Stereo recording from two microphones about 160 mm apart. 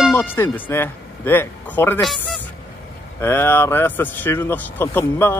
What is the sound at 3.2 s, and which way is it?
Speech, 15° left (ahead or behind).